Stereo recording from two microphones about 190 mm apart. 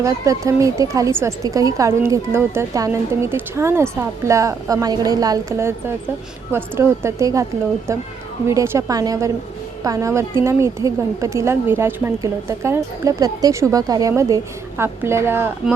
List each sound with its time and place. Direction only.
0.0 s a woman's voice: 15° right (ahead or behind)